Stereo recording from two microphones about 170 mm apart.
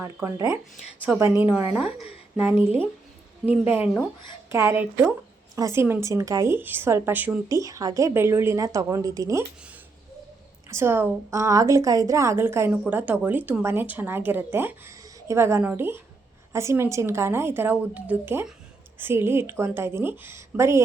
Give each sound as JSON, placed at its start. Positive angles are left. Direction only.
{"t": 0.0, "sound": "a woman's voice", "side_deg": -20}
{"t": 10.7, "sound": "a woman's voice", "side_deg": -15}